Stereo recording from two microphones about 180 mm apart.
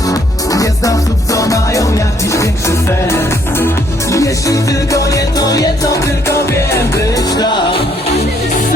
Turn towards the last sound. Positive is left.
turn(degrees=25)  # may be behind; listen again after turning